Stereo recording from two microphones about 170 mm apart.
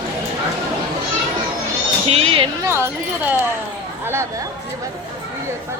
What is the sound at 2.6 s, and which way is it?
Speech, 15° right (ahead or behind).